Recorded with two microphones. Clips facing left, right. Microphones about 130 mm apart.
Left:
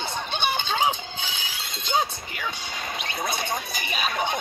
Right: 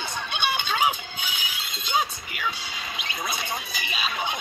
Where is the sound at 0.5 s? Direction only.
30° left (ahead or behind).